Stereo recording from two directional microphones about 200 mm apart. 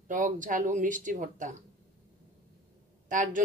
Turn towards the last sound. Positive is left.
turn(degrees=-40)  # may be behind; listen again after turning